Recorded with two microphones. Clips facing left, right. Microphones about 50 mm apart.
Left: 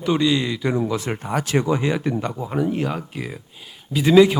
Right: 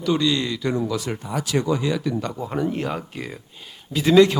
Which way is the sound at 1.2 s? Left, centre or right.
Left.